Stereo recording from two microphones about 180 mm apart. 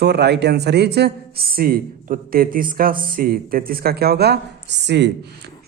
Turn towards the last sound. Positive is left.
turn(degrees=-70)  # may be behind; listen again after turning